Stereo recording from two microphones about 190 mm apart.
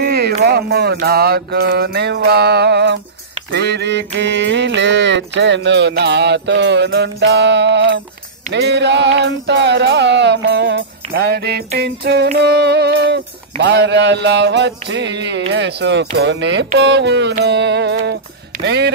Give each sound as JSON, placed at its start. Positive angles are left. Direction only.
{"t": 0.0, "sound": "a sound", "side_deg": -55}
{"t": 0.5, "sound": "music", "side_deg": -55}
{"t": 3.5, "sound": "mantra", "side_deg": -65}
{"t": 8.5, "sound": "music", "side_deg": -65}
{"t": 18.6, "sound": "speech", "side_deg": -60}